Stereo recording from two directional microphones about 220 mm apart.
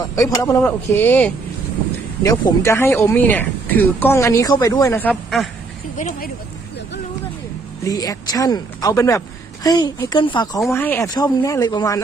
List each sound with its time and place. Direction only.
0.0 s speech: 15° left (ahead or behind)
6.0 s speech: 40° left (ahead or behind)
7.9 s speech: 15° left (ahead or behind)